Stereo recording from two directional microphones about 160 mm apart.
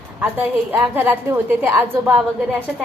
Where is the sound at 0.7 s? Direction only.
10° right (ahead or behind).